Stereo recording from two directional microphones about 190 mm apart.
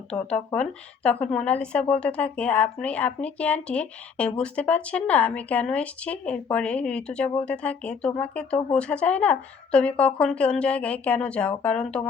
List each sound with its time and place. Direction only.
0.3 s a woman's voice: 5° left (ahead or behind)